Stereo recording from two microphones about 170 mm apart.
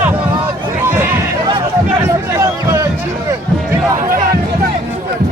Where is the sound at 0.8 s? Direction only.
15° right (ahead or behind).